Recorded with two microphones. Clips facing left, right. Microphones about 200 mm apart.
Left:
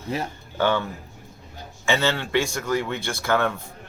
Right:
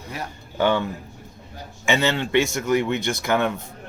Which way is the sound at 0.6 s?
15° right (ahead or behind).